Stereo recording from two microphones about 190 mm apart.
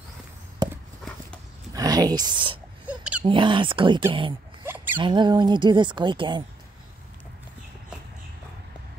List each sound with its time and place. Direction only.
0.6 s a sound: 20° right (ahead or behind)
1.7 s speech: 20° right (ahead or behind)
2.9 s a sound: 5° right (ahead or behind)
3.3 s speech: 25° right (ahead or behind)
4.6 s zipper: 10° right (ahead or behind)
4.9 s speech: 25° right (ahead or behind)